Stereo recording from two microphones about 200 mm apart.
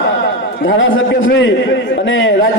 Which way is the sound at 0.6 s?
75° left (ahead or behind).